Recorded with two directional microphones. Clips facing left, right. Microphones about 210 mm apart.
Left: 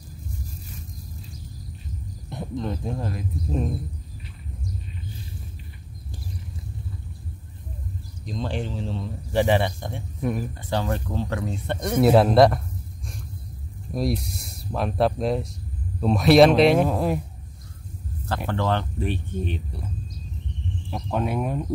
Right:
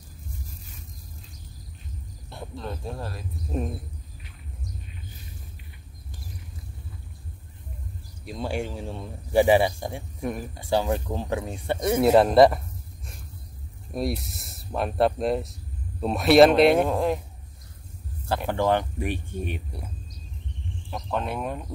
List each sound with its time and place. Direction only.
2.2 s speech: 20° left (ahead or behind)
8.3 s speech: 10° right (ahead or behind)
13.9 s speech: centre (ahead or behind)
18.2 s speech: 10° right (ahead or behind)
20.9 s speech: 10° left (ahead or behind)